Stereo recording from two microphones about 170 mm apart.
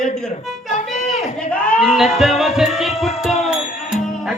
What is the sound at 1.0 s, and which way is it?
Speech, 5° left (ahead or behind).